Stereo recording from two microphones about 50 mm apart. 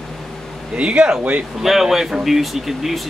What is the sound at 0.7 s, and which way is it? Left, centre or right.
Speech, right.